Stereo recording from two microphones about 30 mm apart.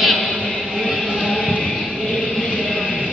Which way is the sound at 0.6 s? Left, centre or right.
Centre.